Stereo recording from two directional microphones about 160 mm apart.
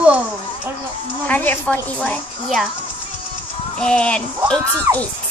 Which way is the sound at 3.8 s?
5° left (ahead or behind).